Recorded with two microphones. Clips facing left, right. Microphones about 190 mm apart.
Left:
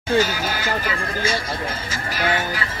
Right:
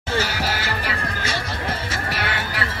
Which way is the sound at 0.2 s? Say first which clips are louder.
Left 3 dB; 70° right (ahead or behind).